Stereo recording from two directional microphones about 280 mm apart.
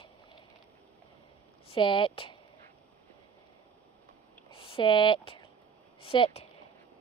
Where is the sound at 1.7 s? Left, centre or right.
Centre.